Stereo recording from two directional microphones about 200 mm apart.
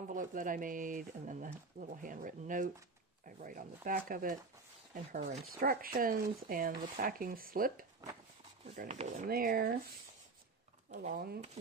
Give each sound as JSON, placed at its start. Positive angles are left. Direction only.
{"t": 0.1, "sound": "speech", "side_deg": -40}
{"t": 8.7, "sound": "speech", "side_deg": -35}
{"t": 10.9, "sound": "speech", "side_deg": -35}